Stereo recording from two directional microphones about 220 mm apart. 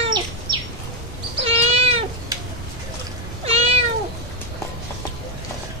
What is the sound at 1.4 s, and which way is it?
Cat, 25° right (ahead or behind).